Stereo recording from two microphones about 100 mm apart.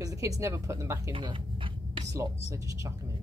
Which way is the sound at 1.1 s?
60° right (ahead or behind).